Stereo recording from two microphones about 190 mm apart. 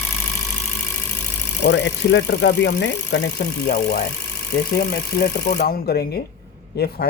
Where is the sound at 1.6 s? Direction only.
75° left (ahead or behind).